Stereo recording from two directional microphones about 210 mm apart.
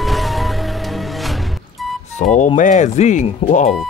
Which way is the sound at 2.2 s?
35° left (ahead or behind).